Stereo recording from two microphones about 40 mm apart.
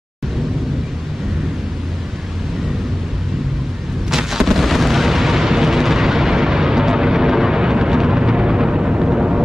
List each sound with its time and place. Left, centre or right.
4.1 s artillery fire: centre